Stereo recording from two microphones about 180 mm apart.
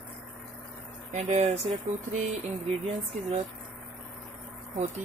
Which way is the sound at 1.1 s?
40° right (ahead or behind).